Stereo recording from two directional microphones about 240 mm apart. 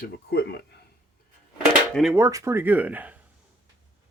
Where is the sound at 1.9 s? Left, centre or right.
Centre.